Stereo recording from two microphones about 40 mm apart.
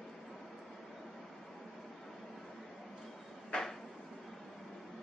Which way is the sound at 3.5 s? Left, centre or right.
Left.